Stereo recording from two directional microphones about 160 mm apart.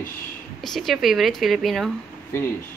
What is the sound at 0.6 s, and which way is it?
Speech, centre (ahead or behind).